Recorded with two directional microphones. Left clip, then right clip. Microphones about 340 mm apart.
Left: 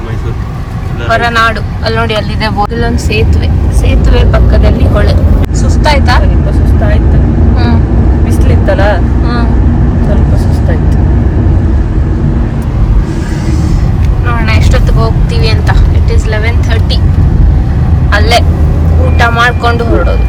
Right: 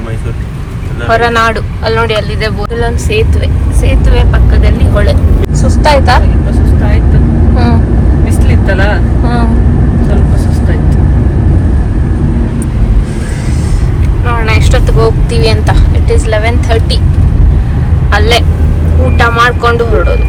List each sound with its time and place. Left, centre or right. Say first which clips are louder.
1.1 s speech: even; centre
5.6 s vehicle: right 3 dB; centre
7.5 s vehicle: right 2 dB; centre
14.3 s speech: right 1 dB; centre
18.1 s speech: left 1 dB; centre